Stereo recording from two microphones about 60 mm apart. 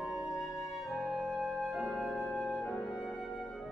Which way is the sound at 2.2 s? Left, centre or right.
Centre.